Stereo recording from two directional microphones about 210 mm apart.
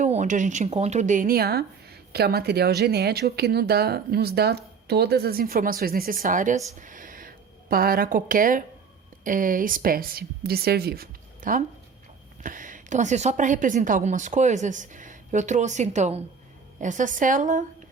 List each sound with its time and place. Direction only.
0.0 s a woman's voice: 35° right (ahead or behind)